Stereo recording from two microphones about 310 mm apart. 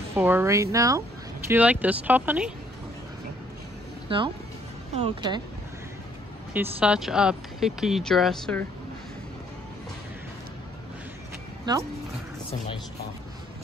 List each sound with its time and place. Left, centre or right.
0.1 s speech: centre
4.1 s speech: centre
6.5 s speech: centre